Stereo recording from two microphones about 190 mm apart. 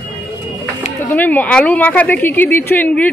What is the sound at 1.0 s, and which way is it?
A woman's voice, 10° left (ahead or behind).